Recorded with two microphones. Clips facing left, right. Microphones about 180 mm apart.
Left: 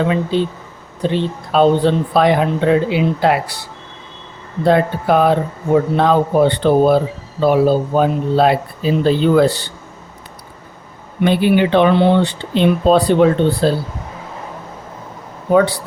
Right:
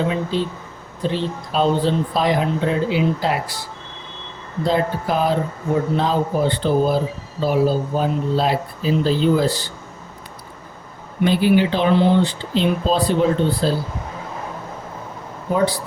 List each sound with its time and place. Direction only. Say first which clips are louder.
0.1 s speech: left 5 dB; 60° left (ahead or behind)
4.6 s speech: left 6 dB; 60° left (ahead or behind)
11.2 s speech: left 2 dB; 60° left (ahead or behind)
15.5 s speech: left 6 dB; 65° left (ahead or behind)